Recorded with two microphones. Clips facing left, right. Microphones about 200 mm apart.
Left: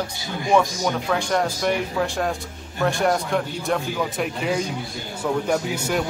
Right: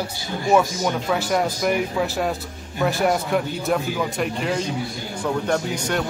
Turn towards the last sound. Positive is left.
turn(degrees=5)  # may be behind; listen again after turning